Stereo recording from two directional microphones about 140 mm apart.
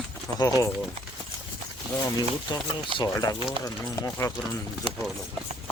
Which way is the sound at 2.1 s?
30° left (ahead or behind).